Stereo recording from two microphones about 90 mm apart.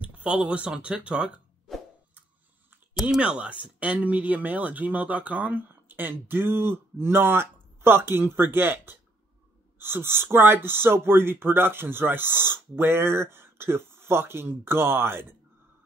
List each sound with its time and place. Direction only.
0.0 s a sound: 15° right (ahead or behind)
0.7 s speech: 10° right (ahead or behind)
3.0 s speech: 5° right (ahead or behind); by 15.3 s 25° right (ahead or behind)